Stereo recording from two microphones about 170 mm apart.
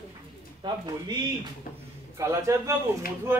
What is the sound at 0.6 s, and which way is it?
Speech, 25° right (ahead or behind).